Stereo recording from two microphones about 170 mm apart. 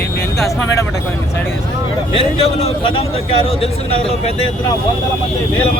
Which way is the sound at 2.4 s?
35° left (ahead or behind).